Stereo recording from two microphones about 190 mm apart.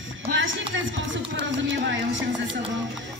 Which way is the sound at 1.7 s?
80° right.